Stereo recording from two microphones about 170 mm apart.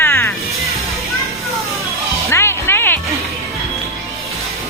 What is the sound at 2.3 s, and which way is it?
Music, 15° left (ahead or behind).